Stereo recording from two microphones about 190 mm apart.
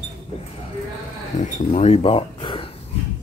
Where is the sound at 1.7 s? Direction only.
35° left (ahead or behind).